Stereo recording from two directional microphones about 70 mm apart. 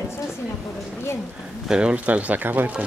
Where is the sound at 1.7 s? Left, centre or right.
Centre.